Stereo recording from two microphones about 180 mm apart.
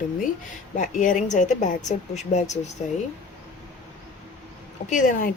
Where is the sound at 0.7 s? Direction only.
45° left (ahead or behind).